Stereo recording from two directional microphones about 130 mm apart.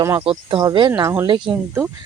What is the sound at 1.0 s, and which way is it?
Speech, 25° right (ahead or behind).